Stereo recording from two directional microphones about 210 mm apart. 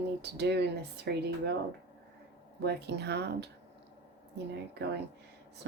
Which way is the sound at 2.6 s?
55° right (ahead or behind).